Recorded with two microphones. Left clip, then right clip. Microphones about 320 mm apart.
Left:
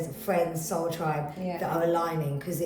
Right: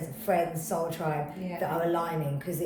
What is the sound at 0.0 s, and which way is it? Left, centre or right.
A woman's voice, centre.